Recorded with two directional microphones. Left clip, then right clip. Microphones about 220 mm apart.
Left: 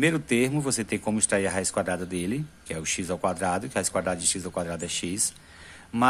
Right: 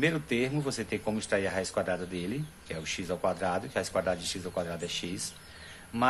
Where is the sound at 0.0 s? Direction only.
40° left (ahead or behind).